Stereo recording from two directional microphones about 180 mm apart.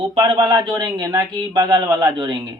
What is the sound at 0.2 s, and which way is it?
Speech, 20° right (ahead or behind).